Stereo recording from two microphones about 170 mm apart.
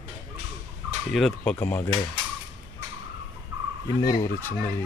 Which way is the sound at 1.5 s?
15° left (ahead or behind).